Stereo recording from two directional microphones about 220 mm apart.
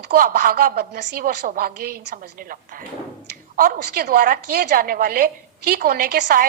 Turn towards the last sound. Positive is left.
turn(degrees=-45)  # may be behind; listen again after turning